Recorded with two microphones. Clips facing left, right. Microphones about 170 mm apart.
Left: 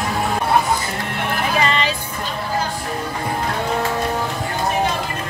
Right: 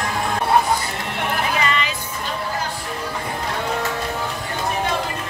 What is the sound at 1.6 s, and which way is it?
Music, 30° left (ahead or behind).